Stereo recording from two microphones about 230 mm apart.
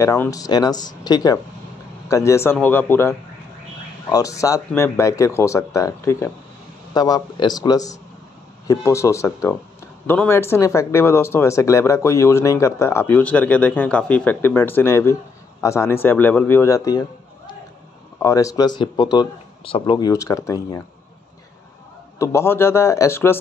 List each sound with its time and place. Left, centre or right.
0.0 s speech: centre
18.2 s speech: centre
22.2 s speech: centre